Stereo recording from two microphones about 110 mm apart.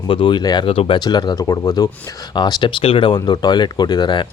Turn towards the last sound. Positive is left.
turn(degrees=40)  # may be behind; listen again after turning